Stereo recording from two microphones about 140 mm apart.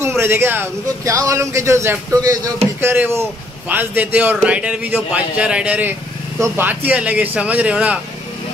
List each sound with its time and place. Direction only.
0.0 s a man's voice: 15° right (ahead or behind)